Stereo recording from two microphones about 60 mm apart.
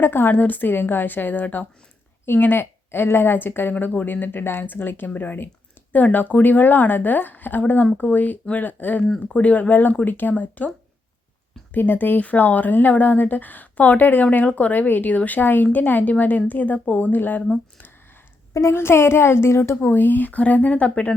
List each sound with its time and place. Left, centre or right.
0.0 s a woman's voice: left
11.7 s speech: left
18.7 s a woman's voice: left
19.8 s speech: left